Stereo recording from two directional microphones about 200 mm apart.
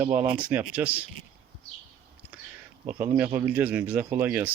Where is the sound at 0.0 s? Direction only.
10° right (ahead or behind).